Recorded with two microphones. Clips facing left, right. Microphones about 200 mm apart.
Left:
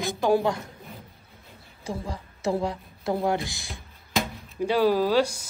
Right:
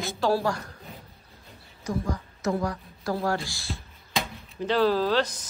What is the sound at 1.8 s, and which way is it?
Speech, 30° left (ahead or behind).